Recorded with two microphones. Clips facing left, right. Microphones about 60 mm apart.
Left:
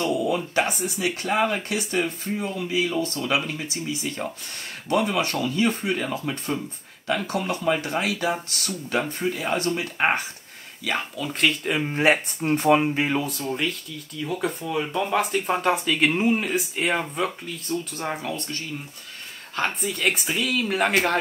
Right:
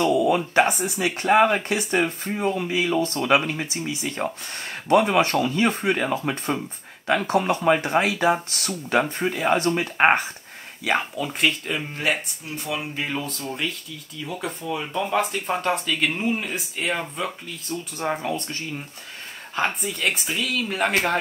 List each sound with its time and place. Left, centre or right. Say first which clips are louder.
0.6 s speech: right 4 dB; right
11.1 s speech: even; centre
11.6 s speech: left 3 dB; centre
11.9 s speech: left 6 dB; left
12.4 s speech: left 11 dB; left
12.8 s speech: left 5 dB; centre
17.9 s speech: right 3 dB; centre
19.8 s speech: left 1 dB; centre